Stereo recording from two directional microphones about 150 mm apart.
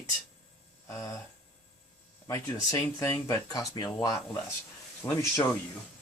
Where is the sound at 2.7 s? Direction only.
20° left (ahead or behind).